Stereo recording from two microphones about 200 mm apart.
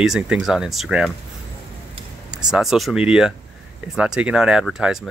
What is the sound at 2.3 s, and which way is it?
Speech, 5° right (ahead or behind).